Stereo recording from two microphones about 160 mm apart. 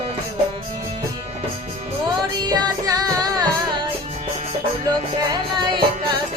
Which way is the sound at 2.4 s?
25° right (ahead or behind).